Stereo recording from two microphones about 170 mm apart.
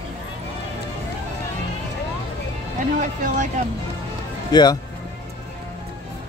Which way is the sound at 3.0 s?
50° right (ahead or behind).